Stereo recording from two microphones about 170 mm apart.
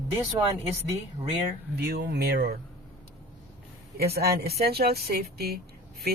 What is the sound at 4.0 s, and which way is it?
Speech, 70° right (ahead or behind).